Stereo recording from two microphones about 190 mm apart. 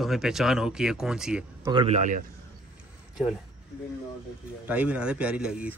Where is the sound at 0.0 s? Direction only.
Centre (ahead or behind).